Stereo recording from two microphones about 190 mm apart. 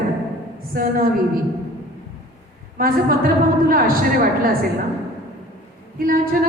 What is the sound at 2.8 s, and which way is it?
A woman's voice, 50° right (ahead or behind).